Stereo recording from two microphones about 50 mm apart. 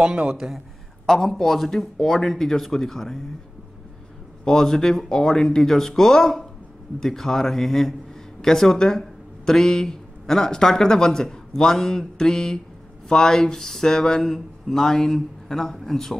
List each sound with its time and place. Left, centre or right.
0.0 s a man's voice: centre
1.0 s speech: centre
4.5 s speech: centre